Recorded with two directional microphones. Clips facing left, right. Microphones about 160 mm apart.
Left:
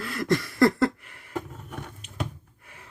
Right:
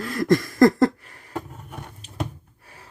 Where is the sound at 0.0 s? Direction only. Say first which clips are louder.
Right 5 dB; 45° right (ahead or behind).